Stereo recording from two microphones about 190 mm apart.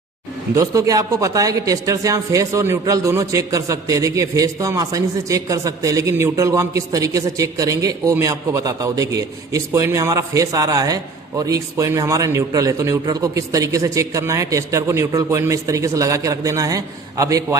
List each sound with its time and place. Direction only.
0.5 s a man's voice: 15° right (ahead or behind)